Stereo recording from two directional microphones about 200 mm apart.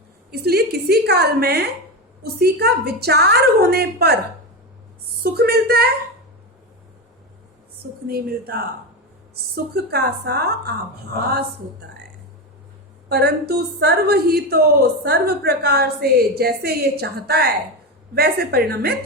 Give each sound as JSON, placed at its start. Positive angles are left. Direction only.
{"t": 0.3, "sound": "a woman's voice", "side_deg": -50}
{"t": 5.2, "sound": "a woman's voice", "side_deg": -50}
{"t": 8.0, "sound": "a woman's voice", "side_deg": -50}
{"t": 9.7, "sound": "a woman's voice", "side_deg": -55}
{"t": 13.1, "sound": "a woman's voice", "side_deg": -55}